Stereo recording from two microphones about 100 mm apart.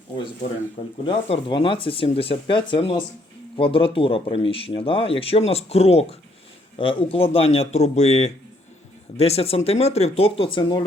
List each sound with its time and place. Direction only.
1.5 s speech: 55° left (ahead or behind); by 6.1 s 90° left
6.7 s speech: 65° left (ahead or behind)